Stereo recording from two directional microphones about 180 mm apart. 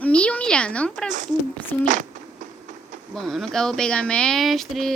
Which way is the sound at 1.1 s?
45° right (ahead or behind).